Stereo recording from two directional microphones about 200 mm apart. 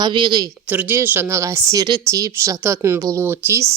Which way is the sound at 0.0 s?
25° right (ahead or behind).